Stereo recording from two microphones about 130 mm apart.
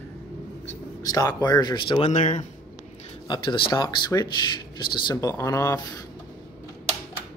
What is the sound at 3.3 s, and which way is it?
Speech, 40° left (ahead or behind).